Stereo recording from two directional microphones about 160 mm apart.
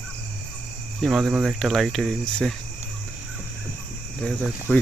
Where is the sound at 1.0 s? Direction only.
Centre (ahead or behind).